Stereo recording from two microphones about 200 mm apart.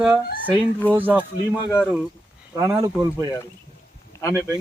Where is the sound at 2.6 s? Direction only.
15° right (ahead or behind).